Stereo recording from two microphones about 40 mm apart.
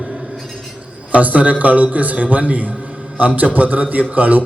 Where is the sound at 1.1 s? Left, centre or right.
Right.